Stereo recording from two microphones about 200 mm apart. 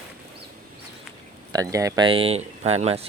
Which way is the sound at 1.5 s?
15° right (ahead or behind).